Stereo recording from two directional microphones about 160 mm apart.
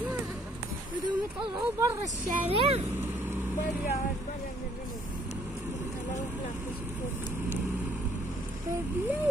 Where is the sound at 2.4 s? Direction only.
35° right (ahead or behind).